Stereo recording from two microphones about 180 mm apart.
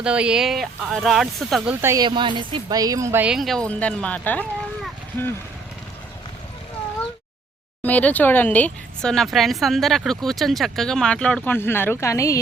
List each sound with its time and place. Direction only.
0.0 s speech: 5° right (ahead or behind)
1.8 s a woman's voice: 15° right (ahead or behind)
2.0 s speech: 25° right (ahead or behind); by 4.4 s 10° left (ahead or behind)
7.8 s speech: 10° left (ahead or behind)